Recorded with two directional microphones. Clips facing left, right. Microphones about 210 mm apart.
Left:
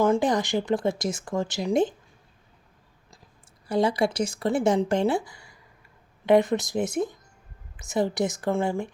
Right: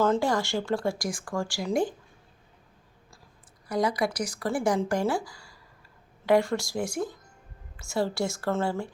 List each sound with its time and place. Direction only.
0.0 s speech: 15° left (ahead or behind)
3.7 s speech: 25° left (ahead or behind)